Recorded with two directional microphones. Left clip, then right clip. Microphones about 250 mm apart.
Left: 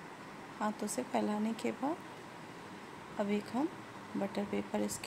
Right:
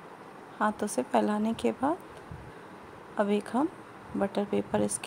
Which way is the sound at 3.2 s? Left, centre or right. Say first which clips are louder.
Right 8 dB; right.